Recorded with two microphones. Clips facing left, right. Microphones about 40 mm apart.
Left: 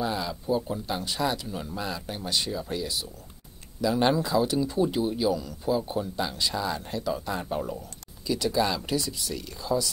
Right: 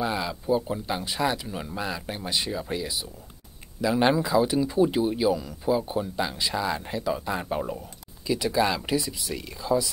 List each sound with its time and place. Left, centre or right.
0.0 s speech: centre